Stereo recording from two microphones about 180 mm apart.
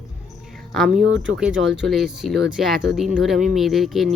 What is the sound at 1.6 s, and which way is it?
Speech, 80° right.